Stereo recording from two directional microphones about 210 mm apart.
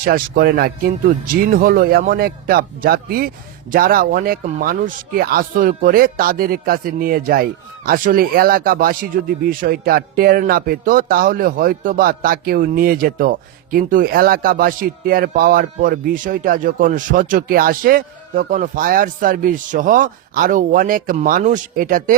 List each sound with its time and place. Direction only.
0.0 s speech: 45° right (ahead or behind)